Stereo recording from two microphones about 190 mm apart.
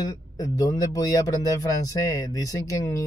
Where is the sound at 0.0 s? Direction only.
15° left (ahead or behind).